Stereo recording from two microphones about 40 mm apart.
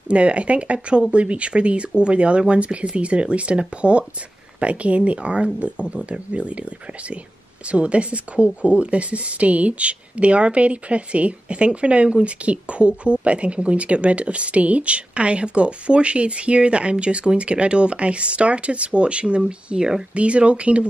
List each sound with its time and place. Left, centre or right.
0.1 s speech: right